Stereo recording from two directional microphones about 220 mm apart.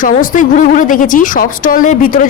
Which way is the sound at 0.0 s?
35° left (ahead or behind).